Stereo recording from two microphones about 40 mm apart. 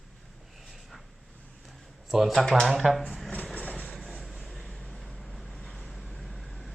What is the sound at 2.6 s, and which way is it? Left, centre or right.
Speech, centre.